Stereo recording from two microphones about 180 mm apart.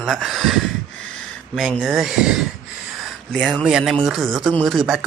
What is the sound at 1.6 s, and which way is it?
Speech, centre (ahead or behind).